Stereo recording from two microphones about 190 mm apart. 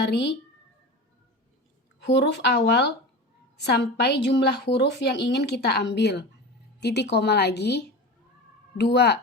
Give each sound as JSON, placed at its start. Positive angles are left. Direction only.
{"t": 0.0, "sound": "a woman's voice", "side_deg": 60}
{"t": 2.0, "sound": "a woman's voice", "side_deg": 65}